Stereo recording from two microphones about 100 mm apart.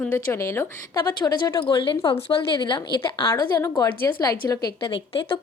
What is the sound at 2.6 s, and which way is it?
Speech, 50° left (ahead or behind).